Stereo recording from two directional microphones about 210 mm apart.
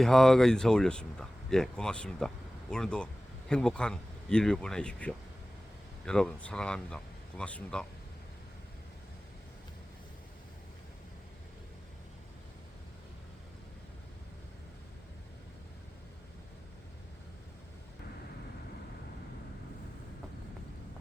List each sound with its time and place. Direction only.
0.0 s speech: centre (ahead or behind)